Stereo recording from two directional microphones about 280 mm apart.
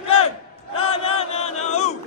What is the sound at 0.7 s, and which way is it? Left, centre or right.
Chant, left.